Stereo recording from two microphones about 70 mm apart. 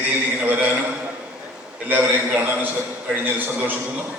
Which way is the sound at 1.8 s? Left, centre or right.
Right.